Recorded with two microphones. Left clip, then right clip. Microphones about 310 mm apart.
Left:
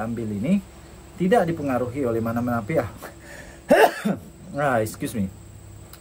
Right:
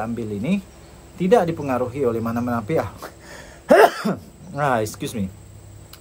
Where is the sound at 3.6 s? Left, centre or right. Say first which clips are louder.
Right 3 dB; right.